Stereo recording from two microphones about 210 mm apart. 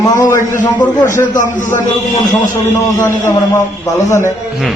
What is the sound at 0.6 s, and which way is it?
Speech, 20° left (ahead or behind).